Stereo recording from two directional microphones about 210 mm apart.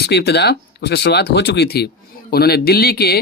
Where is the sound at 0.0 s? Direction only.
50° left (ahead or behind).